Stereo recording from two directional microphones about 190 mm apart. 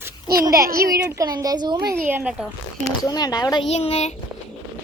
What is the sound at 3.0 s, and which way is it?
Speech, 20° left (ahead or behind).